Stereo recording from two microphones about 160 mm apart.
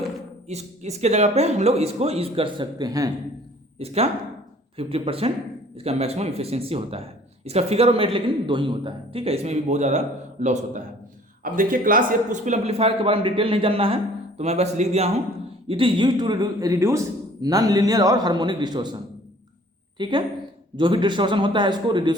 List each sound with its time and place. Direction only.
0.4 s speech: 45° right (ahead or behind); by 3.1 s 25° right (ahead or behind)
3.8 s a man's voice: 40° right (ahead or behind)
11.4 s a man's voice: 60° right (ahead or behind); by 18.9 s 25° right (ahead or behind)
20.0 s a man's voice: 30° right (ahead or behind)